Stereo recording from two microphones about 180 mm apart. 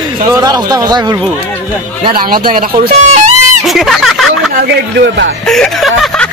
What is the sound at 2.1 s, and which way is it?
A man's voice, 55° right (ahead or behind).